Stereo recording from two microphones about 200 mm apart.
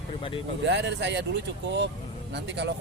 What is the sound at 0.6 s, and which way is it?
Speech, 60° right (ahead or behind).